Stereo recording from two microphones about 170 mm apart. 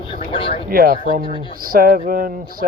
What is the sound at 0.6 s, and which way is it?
Speech, 60° right (ahead or behind).